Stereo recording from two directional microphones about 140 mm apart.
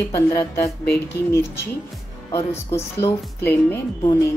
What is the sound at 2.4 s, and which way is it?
A woman's voice, 20° left (ahead or behind).